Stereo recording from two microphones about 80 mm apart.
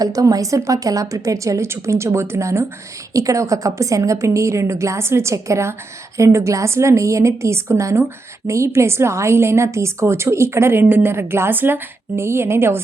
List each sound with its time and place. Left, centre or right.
0.0 s a woman's voice: right